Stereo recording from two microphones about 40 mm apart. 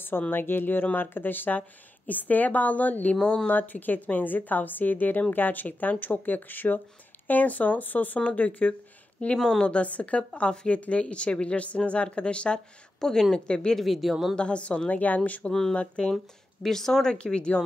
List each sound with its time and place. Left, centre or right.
0.3 s a woman's voice: left
3.2 s speech: left
3.4 s a woman's voice: left
8.2 s speech: left
13.0 s speech: centre
13.7 s speech: centre
14.3 s speech: left
16.6 s speech: centre
17.1 s speech: left